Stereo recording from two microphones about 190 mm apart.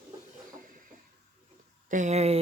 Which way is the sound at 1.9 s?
40° right (ahead or behind).